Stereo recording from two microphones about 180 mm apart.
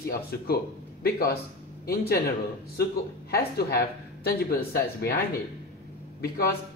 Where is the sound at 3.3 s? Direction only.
60° left (ahead or behind).